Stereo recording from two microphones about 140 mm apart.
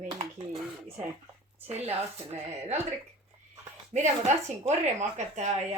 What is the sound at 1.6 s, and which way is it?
Speech, 50° right (ahead or behind).